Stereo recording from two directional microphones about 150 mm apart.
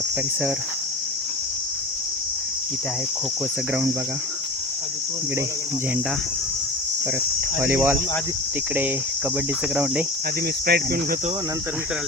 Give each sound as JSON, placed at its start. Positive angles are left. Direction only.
{"t": 7.6, "sound": "cricket", "side_deg": -15}
{"t": 9.7, "sound": "cricket", "side_deg": -10}
{"t": 10.7, "sound": "cricket", "side_deg": -90}